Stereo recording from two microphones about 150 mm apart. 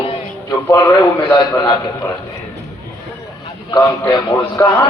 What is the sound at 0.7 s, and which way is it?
Speech, 15° left (ahead or behind).